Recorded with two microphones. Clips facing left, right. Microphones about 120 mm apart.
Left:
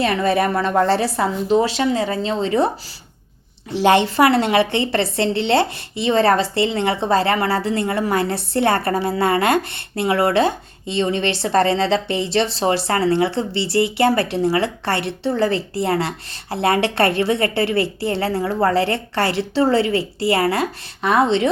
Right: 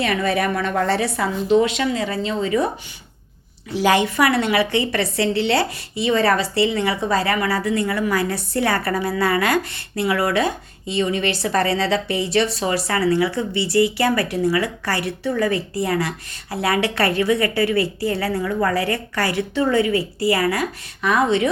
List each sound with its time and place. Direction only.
0.0 s a woman's voice: 30° left (ahead or behind)
3.7 s speech: 25° left (ahead or behind)